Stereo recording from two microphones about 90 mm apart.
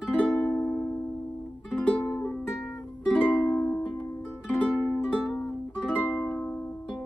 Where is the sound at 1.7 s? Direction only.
15° left (ahead or behind).